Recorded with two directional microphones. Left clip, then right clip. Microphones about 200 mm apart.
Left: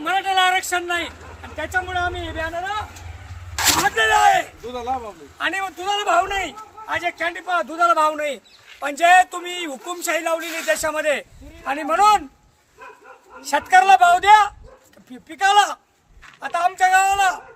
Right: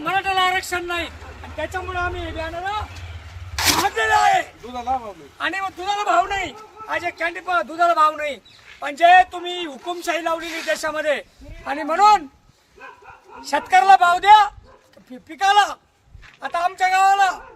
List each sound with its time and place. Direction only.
0.0 s a sound: centre (ahead or behind)
1.5 s a man's voice: centre (ahead or behind)
4.7 s speech: 40° right (ahead or behind)
5.4 s a man's voice: centre (ahead or behind)
8.8 s a man's voice: 15° left (ahead or behind)
13.4 s a man's voice: centre (ahead or behind)